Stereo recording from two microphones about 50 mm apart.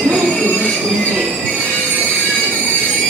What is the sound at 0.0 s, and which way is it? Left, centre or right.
Train wheels squealing, right.